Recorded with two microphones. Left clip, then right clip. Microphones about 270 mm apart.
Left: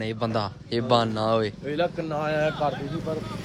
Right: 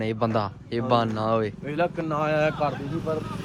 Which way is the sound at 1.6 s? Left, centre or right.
Right.